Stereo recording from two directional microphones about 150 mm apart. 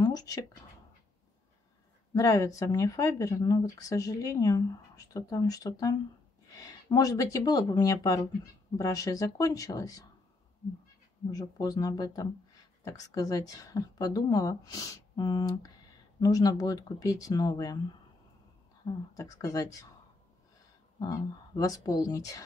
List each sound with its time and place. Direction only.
0.0 s speech: 25° left (ahead or behind)
2.1 s speech: 20° left (ahead or behind)
11.2 s speech: 25° left (ahead or behind)
19.1 s speech: 25° left (ahead or behind)
21.0 s speech: 25° left (ahead or behind)